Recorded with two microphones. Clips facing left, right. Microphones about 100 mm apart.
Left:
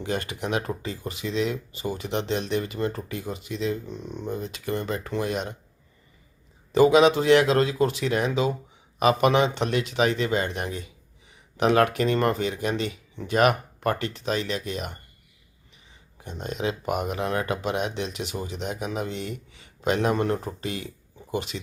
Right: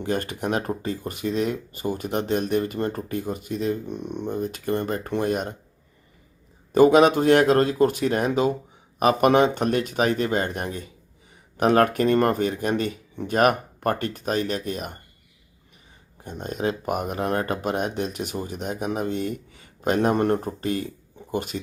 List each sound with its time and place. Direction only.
0.0 s speech: 45° right (ahead or behind)
4.3 s speech: 45° right (ahead or behind)
6.7 s speech: 45° right (ahead or behind)
16.2 s speech: 45° right (ahead or behind)